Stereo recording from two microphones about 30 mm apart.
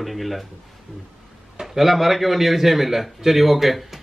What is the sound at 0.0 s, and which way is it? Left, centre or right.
Speech, centre.